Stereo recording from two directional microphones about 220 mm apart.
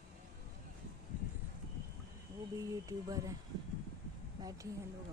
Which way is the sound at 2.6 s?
15° right (ahead or behind).